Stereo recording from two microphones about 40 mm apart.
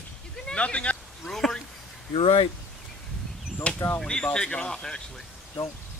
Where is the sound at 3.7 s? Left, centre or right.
Left.